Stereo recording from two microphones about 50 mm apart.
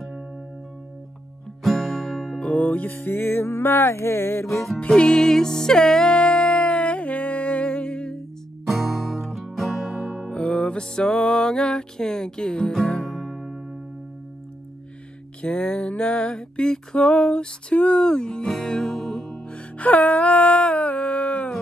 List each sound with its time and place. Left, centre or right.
1.6 s music: centre
2.4 s music: left
4.7 s music: centre
8.6 s music: centre
10.3 s music: left
12.9 s music: centre
15.4 s music: left
17.7 s music: left
18.0 s music: centre
19.4 s music: left